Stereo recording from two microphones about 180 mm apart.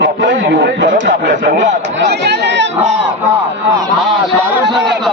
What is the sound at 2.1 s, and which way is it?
Speech, 70° right (ahead or behind).